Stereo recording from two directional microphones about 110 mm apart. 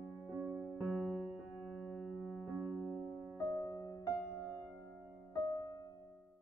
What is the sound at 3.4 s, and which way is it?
Music, 30° left (ahead or behind).